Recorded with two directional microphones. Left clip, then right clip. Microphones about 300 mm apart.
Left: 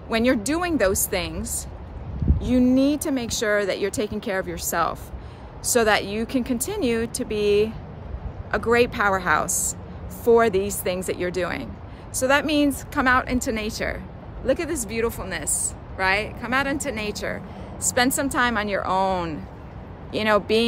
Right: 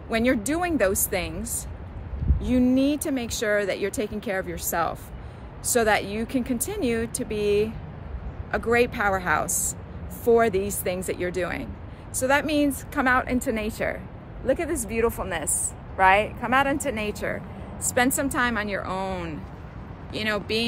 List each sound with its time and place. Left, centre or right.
0.1 s a woman's voice: centre; by 20.6 s left